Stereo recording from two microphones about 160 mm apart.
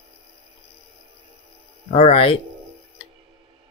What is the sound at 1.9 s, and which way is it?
Speech, 40° left (ahead or behind).